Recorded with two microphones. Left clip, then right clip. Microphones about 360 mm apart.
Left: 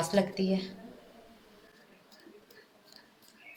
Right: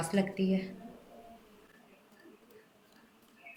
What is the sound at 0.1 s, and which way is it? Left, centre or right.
Speech, left.